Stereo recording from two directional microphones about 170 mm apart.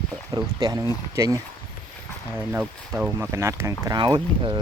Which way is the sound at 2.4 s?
10° right (ahead or behind).